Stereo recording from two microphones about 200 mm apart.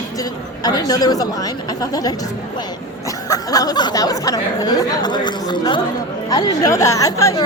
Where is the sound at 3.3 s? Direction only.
20° left (ahead or behind).